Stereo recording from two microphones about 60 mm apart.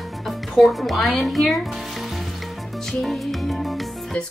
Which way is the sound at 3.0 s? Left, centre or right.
Centre.